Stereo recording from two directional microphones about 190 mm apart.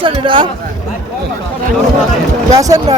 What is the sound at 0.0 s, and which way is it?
Speech, 25° right (ahead or behind).